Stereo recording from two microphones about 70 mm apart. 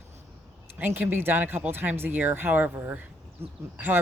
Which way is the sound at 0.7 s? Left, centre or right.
Right.